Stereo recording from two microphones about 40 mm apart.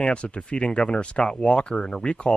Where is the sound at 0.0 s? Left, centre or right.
Left.